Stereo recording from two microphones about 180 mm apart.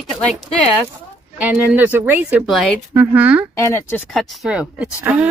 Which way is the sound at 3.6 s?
10° left (ahead or behind).